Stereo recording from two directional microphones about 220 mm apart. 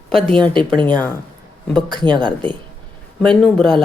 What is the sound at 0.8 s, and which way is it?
Speech, 20° right (ahead or behind).